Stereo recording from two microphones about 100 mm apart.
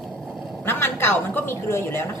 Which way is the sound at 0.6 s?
25° left (ahead or behind).